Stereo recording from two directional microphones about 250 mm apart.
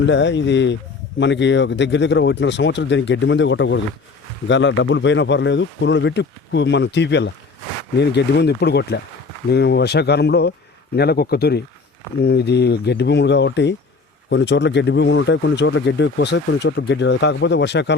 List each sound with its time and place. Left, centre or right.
0.0 s speech: left